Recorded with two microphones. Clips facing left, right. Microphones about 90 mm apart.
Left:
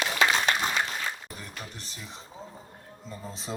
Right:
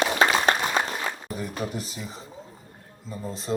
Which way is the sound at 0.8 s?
40° right (ahead or behind).